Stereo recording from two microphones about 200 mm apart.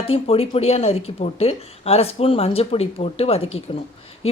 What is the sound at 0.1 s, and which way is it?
Speech, 30° left (ahead or behind).